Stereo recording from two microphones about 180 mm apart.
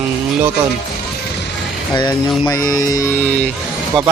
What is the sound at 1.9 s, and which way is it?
Speech, 25° left (ahead or behind).